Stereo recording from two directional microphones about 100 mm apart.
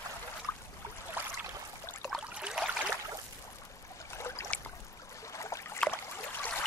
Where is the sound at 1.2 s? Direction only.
20° right (ahead or behind).